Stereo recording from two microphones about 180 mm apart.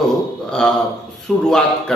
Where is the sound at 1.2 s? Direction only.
Centre (ahead or behind).